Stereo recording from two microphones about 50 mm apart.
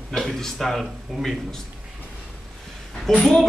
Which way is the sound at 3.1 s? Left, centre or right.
Centre.